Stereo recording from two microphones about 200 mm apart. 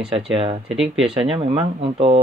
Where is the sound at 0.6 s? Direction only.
5° right (ahead or behind).